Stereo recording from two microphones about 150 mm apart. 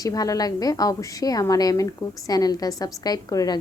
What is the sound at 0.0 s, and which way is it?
A woman's voice, 25° left (ahead or behind).